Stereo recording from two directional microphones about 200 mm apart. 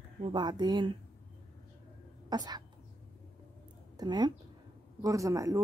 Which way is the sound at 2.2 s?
20° right (ahead or behind).